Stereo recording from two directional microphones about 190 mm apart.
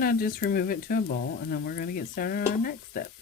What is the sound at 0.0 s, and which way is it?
Stir, 50° left (ahead or behind).